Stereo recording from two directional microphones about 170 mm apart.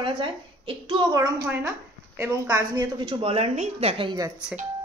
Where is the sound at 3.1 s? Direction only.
35° right (ahead or behind).